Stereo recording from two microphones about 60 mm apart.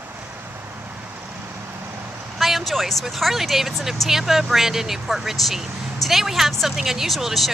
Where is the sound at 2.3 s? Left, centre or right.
Centre.